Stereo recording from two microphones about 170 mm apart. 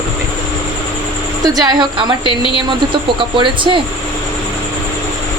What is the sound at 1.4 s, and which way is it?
Speech, 25° right (ahead or behind).